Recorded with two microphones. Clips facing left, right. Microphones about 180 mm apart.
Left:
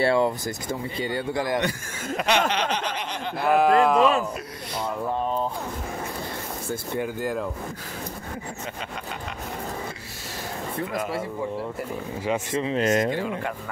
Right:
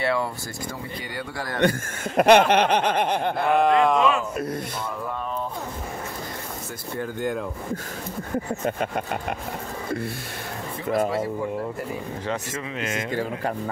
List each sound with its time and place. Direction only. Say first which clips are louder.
0.0 s a man's voice: left 4 dB; 25° left (ahead or behind)
1.6 s speech: right 6 dB; 50° right (ahead or behind)
2.5 s snicker: right 7 dB; 55° right (ahead or behind)
3.3 s speech: left 2 dB; 5° left (ahead or behind)
7.2 s speech: right 1 dB; centre (ahead or behind)
12.6 s speech: left 7 dB; 40° left (ahead or behind)
13.1 s speech: even; 40° right (ahead or behind)